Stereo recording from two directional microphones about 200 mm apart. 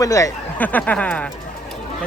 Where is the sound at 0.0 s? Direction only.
15° left (ahead or behind).